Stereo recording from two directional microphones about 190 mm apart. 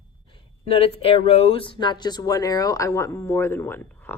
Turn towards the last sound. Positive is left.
turn(degrees=10)  # may be behind; listen again after turning